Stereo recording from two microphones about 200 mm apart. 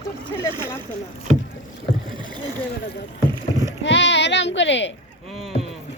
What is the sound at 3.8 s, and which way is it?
Speech, 65° left (ahead or behind).